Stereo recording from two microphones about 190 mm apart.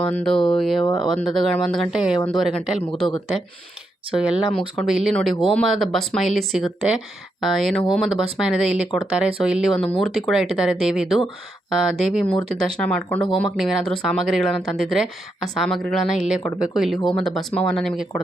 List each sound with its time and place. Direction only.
0.0 s speech: 5° left (ahead or behind)
0.8 s speech: 25° left (ahead or behind)
1.0 s speech: centre (ahead or behind)
4.1 s speech: 5° right (ahead or behind)